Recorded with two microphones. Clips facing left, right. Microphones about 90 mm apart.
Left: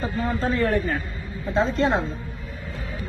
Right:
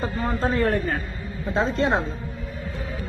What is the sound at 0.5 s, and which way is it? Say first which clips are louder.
Speech: left 1 dB; 35° right (ahead or behind).